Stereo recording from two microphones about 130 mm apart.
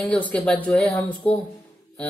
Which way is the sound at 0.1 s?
10° left (ahead or behind).